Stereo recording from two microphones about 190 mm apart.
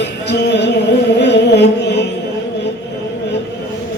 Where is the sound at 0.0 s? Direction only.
65° left (ahead or behind).